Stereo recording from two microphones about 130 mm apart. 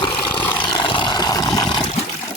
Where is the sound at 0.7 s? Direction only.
40° left (ahead or behind).